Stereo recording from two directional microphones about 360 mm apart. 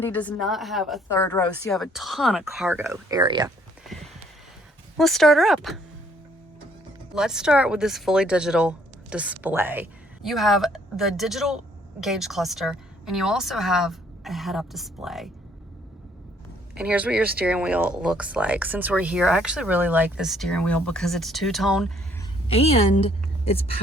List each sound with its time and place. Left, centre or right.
0.0 s speech: centre
3.9 s a sound: centre
4.9 s speech: centre
7.2 s speech: centre
16.7 s speech: centre
22.2 s a woman's voice: centre